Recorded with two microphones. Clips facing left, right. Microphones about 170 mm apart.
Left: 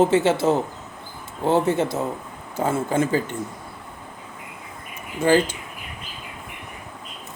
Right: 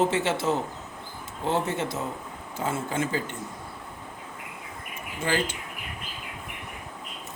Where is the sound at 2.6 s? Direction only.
40° left (ahead or behind).